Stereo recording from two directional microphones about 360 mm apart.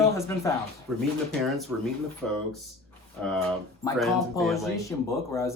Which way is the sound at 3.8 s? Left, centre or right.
Centre.